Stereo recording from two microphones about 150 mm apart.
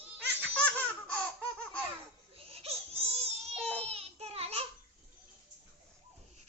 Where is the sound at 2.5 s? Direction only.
40° right (ahead or behind).